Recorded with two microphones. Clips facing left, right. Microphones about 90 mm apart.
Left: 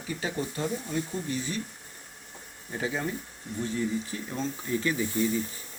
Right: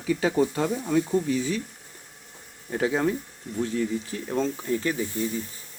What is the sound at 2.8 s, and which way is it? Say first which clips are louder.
Speech: right 7 dB; 80° right.